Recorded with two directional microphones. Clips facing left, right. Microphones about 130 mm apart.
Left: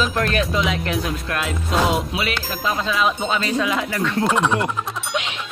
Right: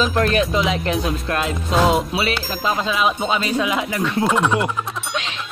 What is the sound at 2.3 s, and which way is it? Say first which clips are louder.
Music: right 2 dB; 20° right (ahead or behind).